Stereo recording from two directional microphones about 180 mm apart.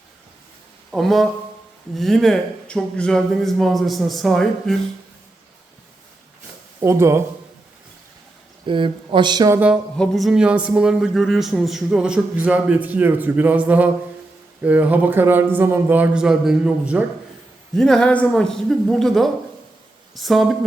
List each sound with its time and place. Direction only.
0.9 s a man's voice: centre (ahead or behind)
6.7 s a man's voice: 15° right (ahead or behind)
8.6 s speech: 30° right (ahead or behind)
10.0 s a man's voice: centre (ahead or behind)